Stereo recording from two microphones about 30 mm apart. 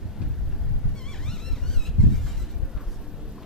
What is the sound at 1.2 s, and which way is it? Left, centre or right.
Vehicle, centre.